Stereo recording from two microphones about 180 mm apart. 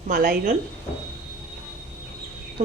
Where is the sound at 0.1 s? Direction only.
55° right (ahead or behind).